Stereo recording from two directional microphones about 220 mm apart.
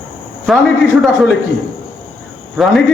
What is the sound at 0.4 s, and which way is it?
Speech, centre (ahead or behind).